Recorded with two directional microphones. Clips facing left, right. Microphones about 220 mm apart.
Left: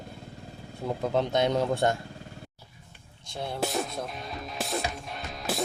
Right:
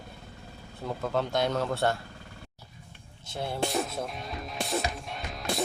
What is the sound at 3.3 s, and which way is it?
Speech, 5° right (ahead or behind).